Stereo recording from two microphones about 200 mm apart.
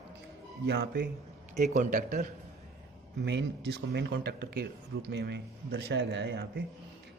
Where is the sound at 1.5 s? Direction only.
35° right (ahead or behind).